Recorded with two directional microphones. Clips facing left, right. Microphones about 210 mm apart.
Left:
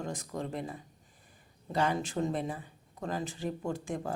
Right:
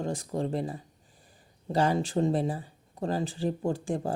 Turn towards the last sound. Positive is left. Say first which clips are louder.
# right 5 dB
turn(degrees=-30)  # may be behind; listen again after turning